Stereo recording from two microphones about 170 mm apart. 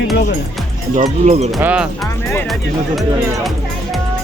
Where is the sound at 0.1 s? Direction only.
70° left (ahead or behind).